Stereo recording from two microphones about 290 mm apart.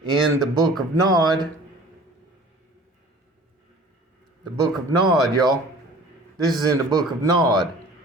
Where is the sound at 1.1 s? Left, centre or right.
Centre.